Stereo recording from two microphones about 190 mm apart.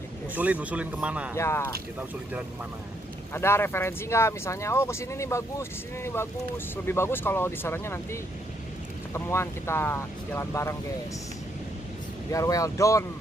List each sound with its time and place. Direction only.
0.3 s speech: 5° right (ahead or behind)
1.3 s speech: 15° left (ahead or behind)
3.3 s speech: 15° left (ahead or behind)
12.3 s speech: 15° left (ahead or behind)